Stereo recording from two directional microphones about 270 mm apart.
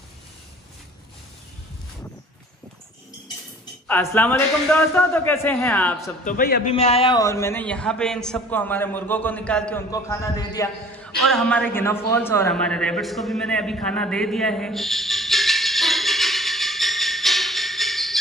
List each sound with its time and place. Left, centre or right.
3.8 s a man's voice: centre
6.2 s a man's voice: left
6.7 s a man's voice: left
11.2 s a man's voice: centre
12.1 s a sound: centre